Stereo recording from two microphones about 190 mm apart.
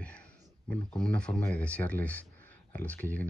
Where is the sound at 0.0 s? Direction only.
5° left (ahead or behind).